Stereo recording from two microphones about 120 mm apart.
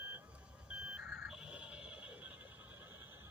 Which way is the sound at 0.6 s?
10° right (ahead or behind).